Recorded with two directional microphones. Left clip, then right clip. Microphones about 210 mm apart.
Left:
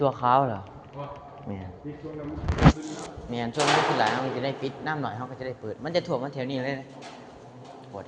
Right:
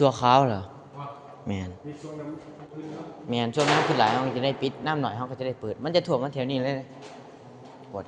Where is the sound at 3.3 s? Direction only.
45° right (ahead or behind).